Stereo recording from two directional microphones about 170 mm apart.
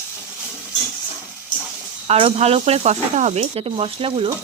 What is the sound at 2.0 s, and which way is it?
Speech, 35° right (ahead or behind).